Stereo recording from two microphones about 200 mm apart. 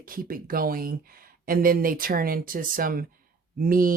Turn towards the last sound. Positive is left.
turn(degrees=-45)  # may be behind; listen again after turning